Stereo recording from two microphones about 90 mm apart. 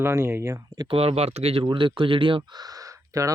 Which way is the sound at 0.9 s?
90° right.